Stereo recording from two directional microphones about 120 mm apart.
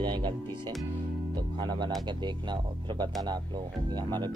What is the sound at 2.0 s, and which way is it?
Speech, 40° right (ahead or behind).